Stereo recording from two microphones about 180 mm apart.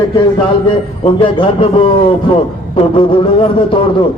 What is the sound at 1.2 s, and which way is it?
A man's voice, 30° left (ahead or behind).